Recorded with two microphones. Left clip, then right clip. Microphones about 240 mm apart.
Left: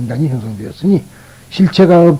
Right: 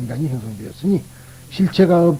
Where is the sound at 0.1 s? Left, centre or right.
Left.